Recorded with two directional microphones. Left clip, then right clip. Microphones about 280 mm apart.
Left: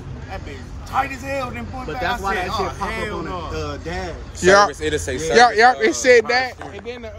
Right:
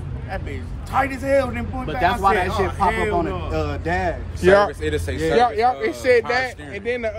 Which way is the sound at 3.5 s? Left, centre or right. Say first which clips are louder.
Right 4 dB; centre.